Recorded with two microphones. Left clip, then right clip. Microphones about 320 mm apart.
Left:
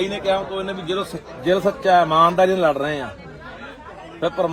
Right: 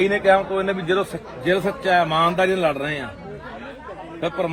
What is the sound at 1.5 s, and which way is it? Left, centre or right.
A man's voice, centre.